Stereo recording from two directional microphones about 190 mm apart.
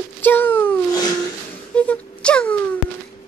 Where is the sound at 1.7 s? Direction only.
5° left (ahead or behind).